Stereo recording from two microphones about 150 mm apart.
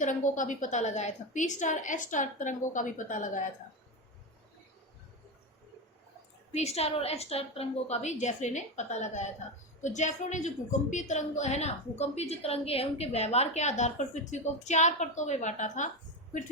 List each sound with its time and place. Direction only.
0.0 s a woman's voice: 55° left (ahead or behind)
6.5 s a woman's voice: 45° left (ahead or behind)